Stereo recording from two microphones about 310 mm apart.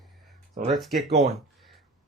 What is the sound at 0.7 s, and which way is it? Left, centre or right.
Speech, centre.